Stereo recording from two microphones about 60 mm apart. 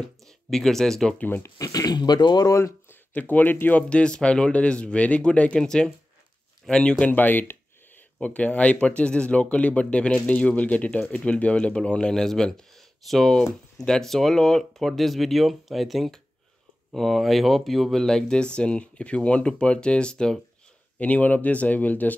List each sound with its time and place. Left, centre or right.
0.5 s speech: centre
1.1 s speech: left
1.6 s speech: left
2.6 s a sound: left
3.2 s speech: left
3.9 s speech: centre
7.1 s a sound: left
8.2 s speech: left
21.0 s speech: left